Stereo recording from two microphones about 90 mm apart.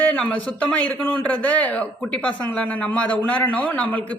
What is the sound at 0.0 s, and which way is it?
Speech, 15° left (ahead or behind).